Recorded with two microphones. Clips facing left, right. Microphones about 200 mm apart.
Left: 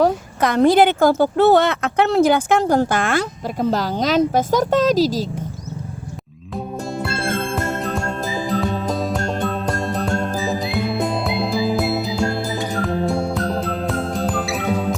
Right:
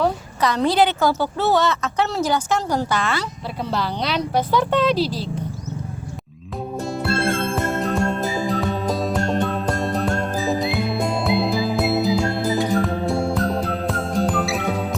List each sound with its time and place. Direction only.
0.0 s a woman's voice: 50° left (ahead or behind)
7.0 s music: centre (ahead or behind)